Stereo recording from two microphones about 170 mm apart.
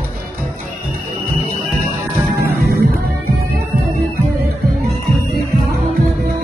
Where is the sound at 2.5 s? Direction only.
65° right (ahead or behind).